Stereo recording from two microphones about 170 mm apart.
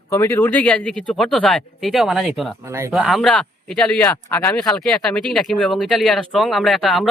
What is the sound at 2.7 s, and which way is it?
Speech, 15° right (ahead or behind).